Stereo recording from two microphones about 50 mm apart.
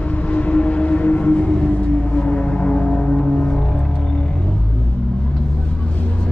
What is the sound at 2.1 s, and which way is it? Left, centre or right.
Music, left.